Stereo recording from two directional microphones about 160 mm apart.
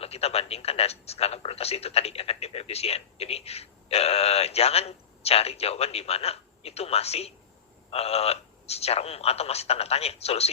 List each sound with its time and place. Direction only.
0.0 s speech: 40° left (ahead or behind)